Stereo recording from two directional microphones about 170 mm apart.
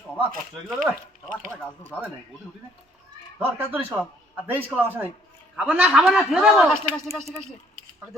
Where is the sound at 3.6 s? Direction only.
10° right (ahead or behind).